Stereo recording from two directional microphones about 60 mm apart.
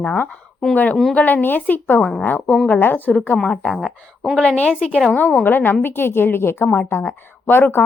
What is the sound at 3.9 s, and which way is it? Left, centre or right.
Speech, centre.